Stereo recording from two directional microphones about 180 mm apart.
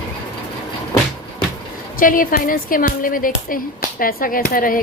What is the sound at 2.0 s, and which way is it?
Speech, 50° left (ahead or behind).